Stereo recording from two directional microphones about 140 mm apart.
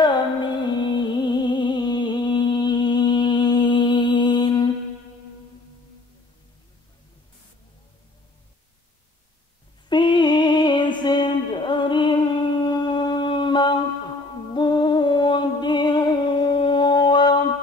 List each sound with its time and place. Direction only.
0.0 s music: 35° left (ahead or behind)
9.8 s music: 35° left (ahead or behind)
12.6 s a sound: 30° left (ahead or behind)
14.5 s music: 35° left (ahead or behind)